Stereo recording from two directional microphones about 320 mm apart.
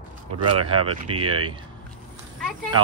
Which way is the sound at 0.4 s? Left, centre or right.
Right.